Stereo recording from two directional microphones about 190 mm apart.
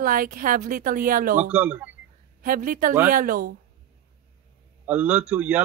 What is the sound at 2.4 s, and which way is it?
Speech, 45° right (ahead or behind).